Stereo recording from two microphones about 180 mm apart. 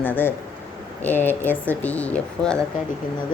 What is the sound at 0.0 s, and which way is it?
A woman's voice, 10° left (ahead or behind).